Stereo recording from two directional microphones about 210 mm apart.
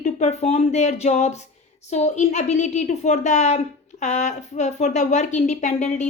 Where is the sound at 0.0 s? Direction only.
35° left (ahead or behind).